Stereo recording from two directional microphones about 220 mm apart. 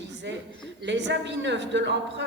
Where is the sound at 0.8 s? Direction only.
55° right (ahead or behind).